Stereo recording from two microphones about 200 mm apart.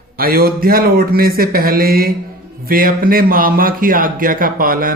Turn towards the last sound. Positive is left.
turn(degrees=-45)  # may be behind; listen again after turning